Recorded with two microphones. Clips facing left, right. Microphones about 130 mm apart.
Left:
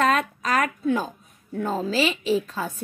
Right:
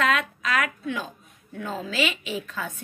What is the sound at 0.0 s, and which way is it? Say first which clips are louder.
A woman's voice: left 3 dB; 40° left (ahead or behind).